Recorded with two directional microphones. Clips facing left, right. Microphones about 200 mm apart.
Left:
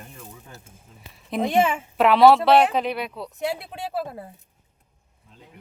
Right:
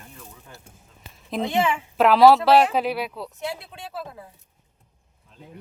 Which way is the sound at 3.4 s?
60° left (ahead or behind).